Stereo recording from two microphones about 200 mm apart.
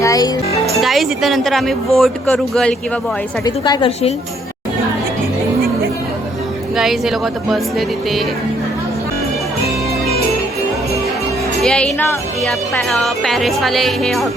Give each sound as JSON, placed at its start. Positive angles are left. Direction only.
{"t": 0.0, "sound": "music", "side_deg": 15}
{"t": 0.6, "sound": "speech", "side_deg": 0}
{"t": 3.4, "sound": "a woman's voice", "side_deg": 20}
{"t": 6.7, "sound": "speech", "side_deg": 0}
{"t": 11.6, "sound": "speech", "side_deg": 5}